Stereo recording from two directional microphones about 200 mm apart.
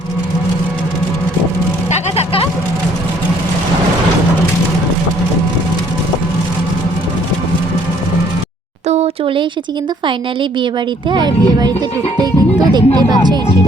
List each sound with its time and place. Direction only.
1.9 s vehicle: 30° left (ahead or behind)
8.9 s a sound: 30° right (ahead or behind)
11.1 s speech: 20° right (ahead or behind)